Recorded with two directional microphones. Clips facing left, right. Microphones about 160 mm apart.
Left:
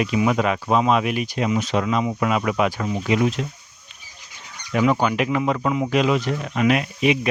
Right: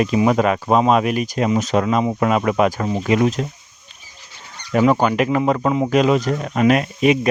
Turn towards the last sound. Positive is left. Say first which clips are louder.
# right 4 dB
turn(degrees=-45)  # may be behind; listen again after turning